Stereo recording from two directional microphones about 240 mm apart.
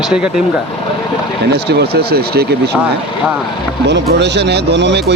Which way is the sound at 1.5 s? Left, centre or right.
Right.